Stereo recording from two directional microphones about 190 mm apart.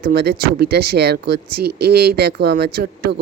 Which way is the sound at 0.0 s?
55° right (ahead or behind).